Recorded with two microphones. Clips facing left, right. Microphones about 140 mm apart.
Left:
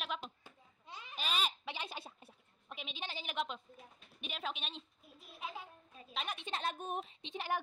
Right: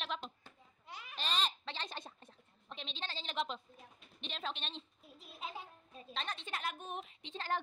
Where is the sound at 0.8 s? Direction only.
25° left (ahead or behind).